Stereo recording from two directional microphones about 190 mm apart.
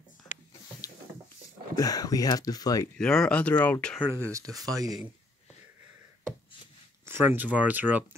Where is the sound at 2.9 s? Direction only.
5° left (ahead or behind).